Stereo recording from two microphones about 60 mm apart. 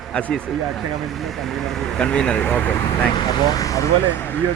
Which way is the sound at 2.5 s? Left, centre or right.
Left.